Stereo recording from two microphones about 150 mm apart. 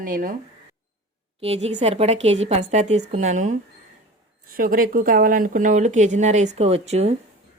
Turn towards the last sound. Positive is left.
turn(degrees=-45)  # may be behind; listen again after turning